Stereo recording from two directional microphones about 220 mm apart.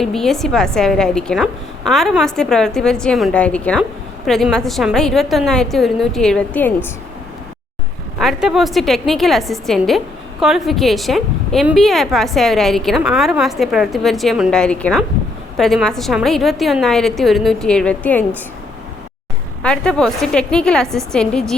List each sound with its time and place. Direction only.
0.0 s a woman's voice: centre (ahead or behind)
8.2 s a woman's voice: centre (ahead or behind)
19.6 s a woman's voice: 5° left (ahead or behind)